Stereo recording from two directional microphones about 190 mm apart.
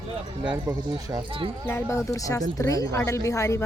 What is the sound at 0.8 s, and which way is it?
Speech, 20° right (ahead or behind).